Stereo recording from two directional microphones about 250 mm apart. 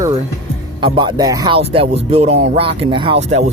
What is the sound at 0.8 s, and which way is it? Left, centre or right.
Speech, centre.